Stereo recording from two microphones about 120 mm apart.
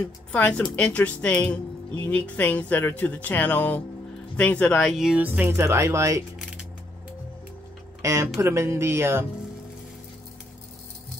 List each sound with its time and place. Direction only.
0.3 s speech: 10° left (ahead or behind); by 6.2 s 25° right (ahead or behind)
8.0 s speech: 25° right (ahead or behind)